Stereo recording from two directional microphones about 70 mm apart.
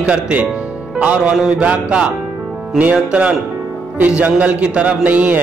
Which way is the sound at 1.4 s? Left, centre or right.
Centre.